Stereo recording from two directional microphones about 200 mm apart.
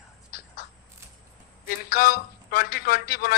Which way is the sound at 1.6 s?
50° left (ahead or behind).